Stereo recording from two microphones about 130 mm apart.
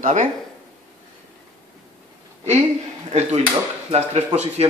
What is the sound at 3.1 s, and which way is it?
A man's voice, 60° right (ahead or behind).